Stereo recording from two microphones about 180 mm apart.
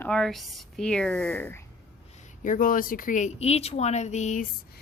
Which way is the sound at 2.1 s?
45° left (ahead or behind).